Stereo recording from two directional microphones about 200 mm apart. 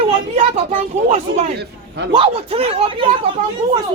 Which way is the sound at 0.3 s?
30° right (ahead or behind).